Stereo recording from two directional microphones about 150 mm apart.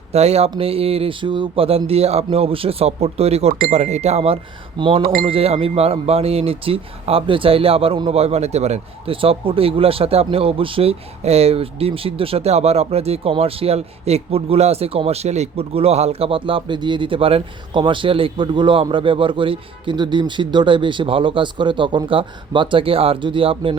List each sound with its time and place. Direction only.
0.1 s speech: 45° right (ahead or behind)